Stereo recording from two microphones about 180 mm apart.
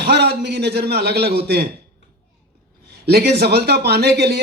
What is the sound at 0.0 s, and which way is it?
Speech, 65° right (ahead or behind).